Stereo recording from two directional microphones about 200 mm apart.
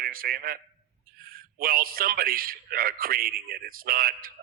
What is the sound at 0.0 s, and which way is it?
A man's voice, 45° right (ahead or behind).